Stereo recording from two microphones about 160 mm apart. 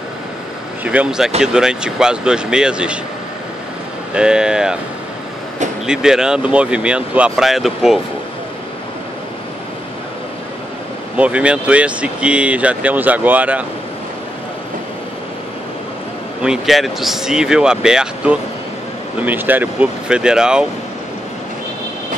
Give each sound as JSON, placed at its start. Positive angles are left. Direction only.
{"t": 0.8, "sound": "speech", "side_deg": -5}
{"t": 4.1, "sound": "speech", "side_deg": -5}
{"t": 5.9, "sound": "speech", "side_deg": -5}
{"t": 11.1, "sound": "speech", "side_deg": -10}
{"t": 16.4, "sound": "speech", "side_deg": 0}